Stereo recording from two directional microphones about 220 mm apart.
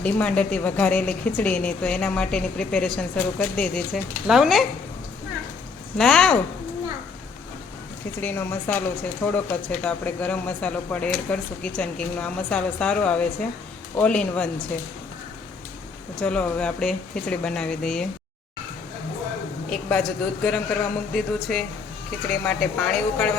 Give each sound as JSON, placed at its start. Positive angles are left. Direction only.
{"t": 0.0, "sound": "a woman's voice", "side_deg": 5}
{"t": 6.0, "sound": "a woman's voice", "side_deg": 5}
{"t": 8.2, "sound": "a woman's voice", "side_deg": 10}
{"t": 16.2, "sound": "a woman's voice", "side_deg": 5}
{"t": 19.7, "sound": "a woman's voice", "side_deg": 0}